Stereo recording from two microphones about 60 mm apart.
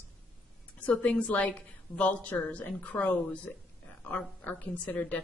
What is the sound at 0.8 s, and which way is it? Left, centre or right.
A woman's voice, left.